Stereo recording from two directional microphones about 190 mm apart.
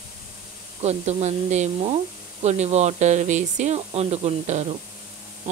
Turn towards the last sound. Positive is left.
turn(degrees=-35)  # may be behind; listen again after turning